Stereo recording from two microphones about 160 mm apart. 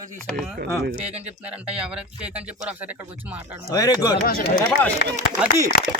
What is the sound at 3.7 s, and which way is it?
Speech, 20° left (ahead or behind).